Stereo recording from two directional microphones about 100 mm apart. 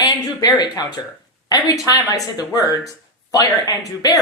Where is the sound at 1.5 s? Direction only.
40° left (ahead or behind).